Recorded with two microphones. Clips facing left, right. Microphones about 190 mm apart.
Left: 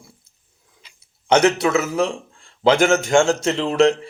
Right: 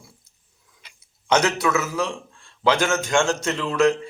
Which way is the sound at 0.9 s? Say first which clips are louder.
Left 4 dB; 30° left (ahead or behind).